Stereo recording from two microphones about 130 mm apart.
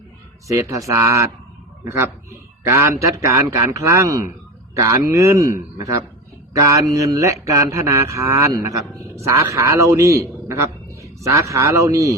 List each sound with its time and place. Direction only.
0.4 s speech: 25° right (ahead or behind)